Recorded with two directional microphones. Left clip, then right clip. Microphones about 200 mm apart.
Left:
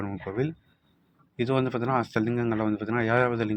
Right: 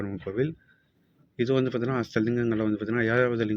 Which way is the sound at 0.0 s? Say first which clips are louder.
Right 1 dB; 55° left (ahead or behind).